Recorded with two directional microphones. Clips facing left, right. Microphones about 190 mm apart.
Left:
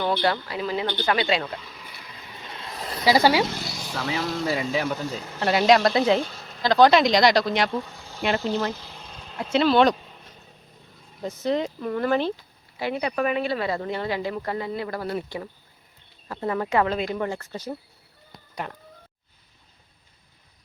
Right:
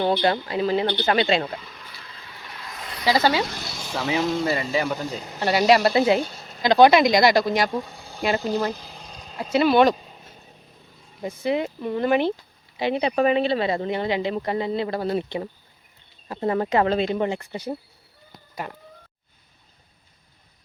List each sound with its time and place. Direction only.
0.1 s speech: 20° right (ahead or behind)
1.6 s vehicle: 5° left (ahead or behind); by 3.0 s 35° left (ahead or behind)
3.1 s speech: 10° left (ahead or behind)
3.6 s speech: 15° right (ahead or behind)
4.4 s speech: centre (ahead or behind)
5.2 s speech: 15° right (ahead or behind)
5.5 s speech: 5° right (ahead or behind)
8.9 s a sound: 35° right (ahead or behind)
9.3 s speech: 5° right (ahead or behind)
18.5 s speech: 5° right (ahead or behind)